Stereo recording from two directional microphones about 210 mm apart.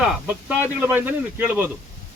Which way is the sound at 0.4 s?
10° right (ahead or behind).